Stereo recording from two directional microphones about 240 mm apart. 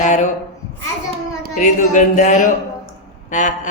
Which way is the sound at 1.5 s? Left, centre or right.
Left.